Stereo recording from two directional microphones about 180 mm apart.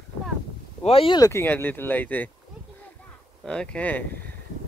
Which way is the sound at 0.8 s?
30° left (ahead or behind).